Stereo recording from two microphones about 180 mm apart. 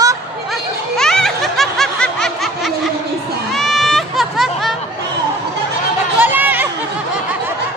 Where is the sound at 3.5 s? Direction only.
Centre (ahead or behind).